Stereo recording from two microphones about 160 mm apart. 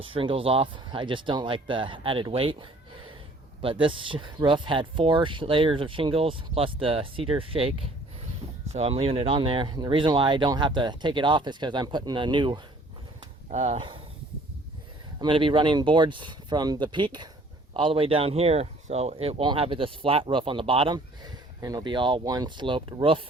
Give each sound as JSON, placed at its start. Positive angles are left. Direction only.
{"t": 0.0, "sound": "speech", "side_deg": -35}
{"t": 8.7, "sound": "speech", "side_deg": -40}
{"t": 13.5, "sound": "speech", "side_deg": -45}
{"t": 13.7, "sound": "speech", "side_deg": -30}
{"t": 15.2, "sound": "speech", "side_deg": -30}